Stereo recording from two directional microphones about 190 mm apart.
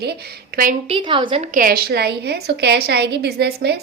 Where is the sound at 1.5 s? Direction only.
50° right (ahead or behind).